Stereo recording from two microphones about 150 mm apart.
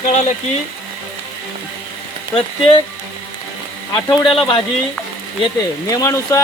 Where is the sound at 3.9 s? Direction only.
35° left (ahead or behind).